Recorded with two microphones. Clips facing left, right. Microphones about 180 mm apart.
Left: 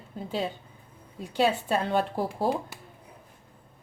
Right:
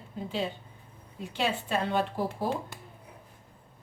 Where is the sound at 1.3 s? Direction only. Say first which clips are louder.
Left 5 dB; 40° left (ahead or behind).